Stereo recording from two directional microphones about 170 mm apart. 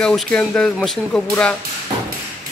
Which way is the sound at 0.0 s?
5° left (ahead or behind).